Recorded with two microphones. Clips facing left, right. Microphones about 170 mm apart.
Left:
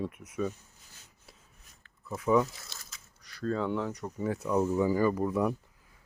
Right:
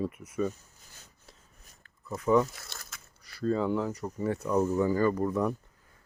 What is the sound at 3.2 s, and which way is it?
Speech, 5° right (ahead or behind).